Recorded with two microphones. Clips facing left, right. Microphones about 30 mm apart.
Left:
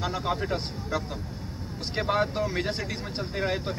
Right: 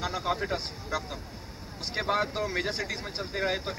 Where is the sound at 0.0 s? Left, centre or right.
Centre.